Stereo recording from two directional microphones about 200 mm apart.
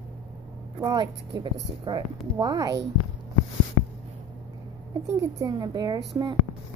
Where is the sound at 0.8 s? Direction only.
20° right (ahead or behind).